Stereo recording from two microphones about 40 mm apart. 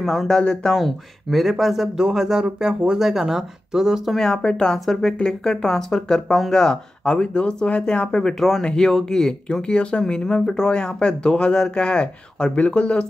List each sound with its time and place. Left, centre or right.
0.0 s speech: centre
0.3 s speech: left
0.7 s speech: centre
4.2 s speech: centre
8.4 s speech: centre
9.7 s speech: left